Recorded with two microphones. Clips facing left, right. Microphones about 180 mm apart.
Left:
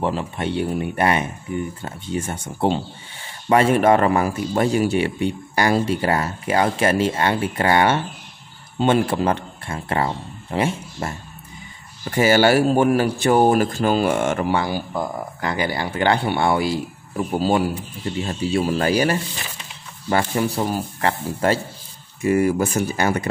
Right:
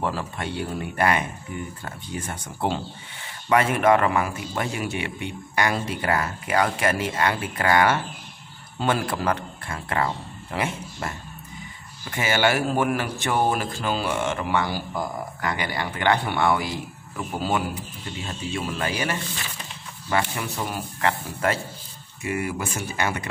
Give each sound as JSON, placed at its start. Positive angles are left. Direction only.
{"t": 0.0, "sound": "a man's voice", "side_deg": 20}